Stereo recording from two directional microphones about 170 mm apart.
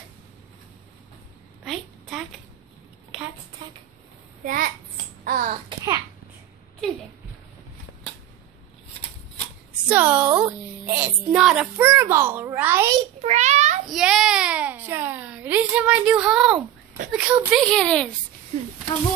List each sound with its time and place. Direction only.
1.6 s a sound: centre (ahead or behind)
4.5 s a child's voice: 55° right (ahead or behind)
5.2 s babbling: 55° right (ahead or behind)
9.8 s a woman's voice: 10° right (ahead or behind)
13.2 s child singing: 40° right (ahead or behind)
13.8 s a child's voice: centre (ahead or behind)
17.6 s speech: 5° left (ahead or behind)